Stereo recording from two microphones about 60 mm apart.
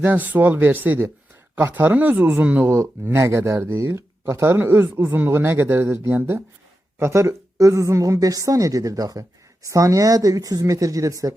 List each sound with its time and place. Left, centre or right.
0.0 s speech: right
2.6 s speech: right
7.0 s a woman's voice: right
9.6 s a woman's voice: right